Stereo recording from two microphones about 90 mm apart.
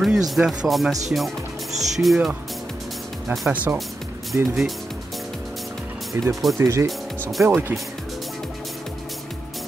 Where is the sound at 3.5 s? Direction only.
15° right (ahead or behind).